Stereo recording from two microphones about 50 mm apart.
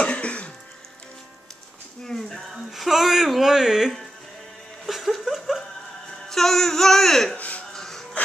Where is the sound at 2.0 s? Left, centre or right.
Centre.